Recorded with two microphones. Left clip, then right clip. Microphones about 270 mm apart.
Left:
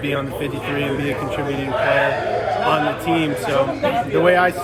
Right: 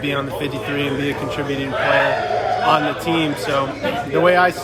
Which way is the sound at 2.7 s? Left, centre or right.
Centre.